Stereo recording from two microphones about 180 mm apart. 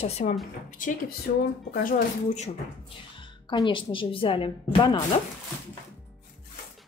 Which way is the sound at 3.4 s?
25° left (ahead or behind).